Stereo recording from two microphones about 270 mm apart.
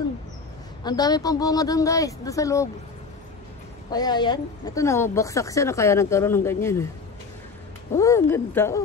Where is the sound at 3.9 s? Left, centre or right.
Centre.